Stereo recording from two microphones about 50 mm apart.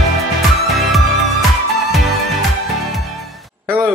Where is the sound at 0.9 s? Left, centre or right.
Centre.